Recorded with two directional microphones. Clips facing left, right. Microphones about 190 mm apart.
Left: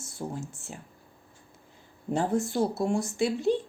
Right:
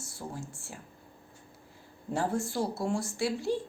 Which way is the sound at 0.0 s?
20° left (ahead or behind).